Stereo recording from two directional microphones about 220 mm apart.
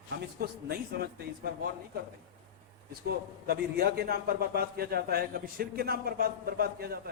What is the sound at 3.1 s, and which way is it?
A man's voice, 45° right (ahead or behind).